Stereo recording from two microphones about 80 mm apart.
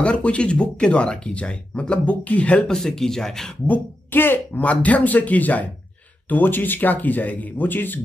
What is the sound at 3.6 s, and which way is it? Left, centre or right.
Speech, left.